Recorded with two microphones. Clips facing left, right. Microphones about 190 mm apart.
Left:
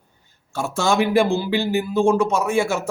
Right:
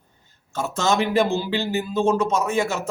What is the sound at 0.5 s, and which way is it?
A man's voice, 10° left (ahead or behind).